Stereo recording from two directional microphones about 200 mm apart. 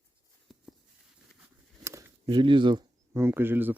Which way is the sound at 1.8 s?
15° right (ahead or behind).